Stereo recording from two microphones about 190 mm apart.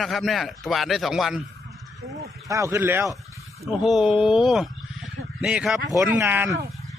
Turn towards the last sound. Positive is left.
turn(degrees=-10)  # may be behind; listen again after turning